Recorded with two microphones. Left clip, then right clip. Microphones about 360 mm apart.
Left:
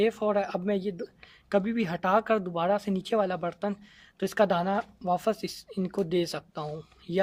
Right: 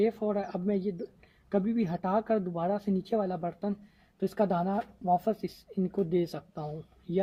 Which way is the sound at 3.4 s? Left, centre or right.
Left.